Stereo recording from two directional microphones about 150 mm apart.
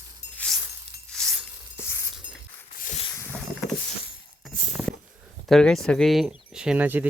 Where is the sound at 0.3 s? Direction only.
5° left (ahead or behind).